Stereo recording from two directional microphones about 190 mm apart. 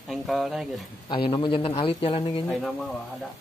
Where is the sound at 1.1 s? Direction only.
25° left (ahead or behind).